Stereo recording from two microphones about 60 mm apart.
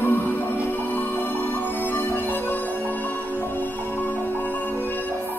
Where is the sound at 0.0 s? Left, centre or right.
Left.